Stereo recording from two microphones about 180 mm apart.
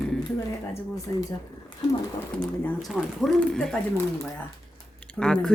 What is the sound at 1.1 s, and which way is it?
Speech, 15° left (ahead or behind).